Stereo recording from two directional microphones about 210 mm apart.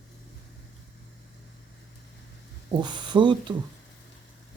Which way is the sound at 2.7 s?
20° right (ahead or behind).